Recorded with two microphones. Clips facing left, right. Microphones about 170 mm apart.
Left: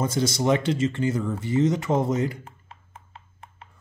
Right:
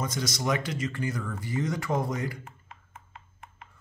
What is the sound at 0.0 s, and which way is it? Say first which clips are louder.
Speech: left 7 dB; 30° left (ahead or behind).